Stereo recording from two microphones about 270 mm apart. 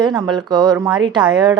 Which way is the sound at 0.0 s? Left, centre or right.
Centre.